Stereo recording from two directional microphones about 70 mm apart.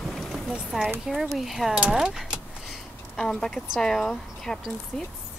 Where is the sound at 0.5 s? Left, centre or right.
Centre.